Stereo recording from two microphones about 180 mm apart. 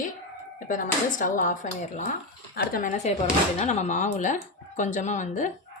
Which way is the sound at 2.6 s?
50° left (ahead or behind).